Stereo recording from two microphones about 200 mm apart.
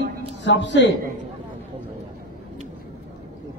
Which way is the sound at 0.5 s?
60° left (ahead or behind).